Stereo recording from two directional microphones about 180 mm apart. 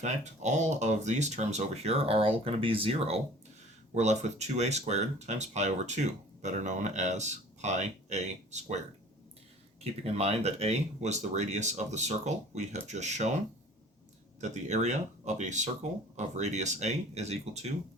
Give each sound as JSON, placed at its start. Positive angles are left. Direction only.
{"t": 0.0, "sound": "speech", "side_deg": -40}
{"t": 9.8, "sound": "speech", "side_deg": -35}
{"t": 14.4, "sound": "speech", "side_deg": -40}